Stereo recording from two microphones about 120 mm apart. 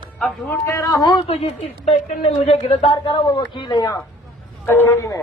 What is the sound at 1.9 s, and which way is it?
A man's voice, 65° left (ahead or behind).